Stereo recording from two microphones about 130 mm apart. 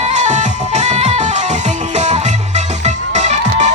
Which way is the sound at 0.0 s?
65° right (ahead or behind).